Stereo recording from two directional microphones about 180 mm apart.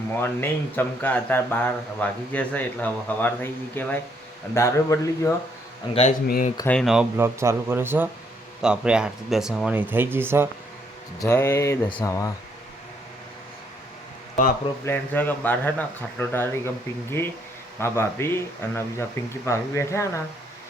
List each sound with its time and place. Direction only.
0.2 s speech: 10° left (ahead or behind)
5.9 s speech: 35° left (ahead or behind)
6.2 s speech: 55° left (ahead or behind)
6.7 s speech: centre (ahead or behind)
11.2 s speech: 15° left (ahead or behind)
14.8 s speech: 10° left (ahead or behind)